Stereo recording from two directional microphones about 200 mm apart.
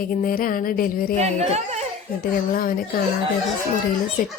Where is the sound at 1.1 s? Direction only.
35° right (ahead or behind).